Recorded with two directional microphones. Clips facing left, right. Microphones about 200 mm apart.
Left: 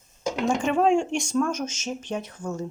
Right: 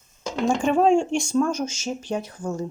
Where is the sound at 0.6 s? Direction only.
45° right (ahead or behind).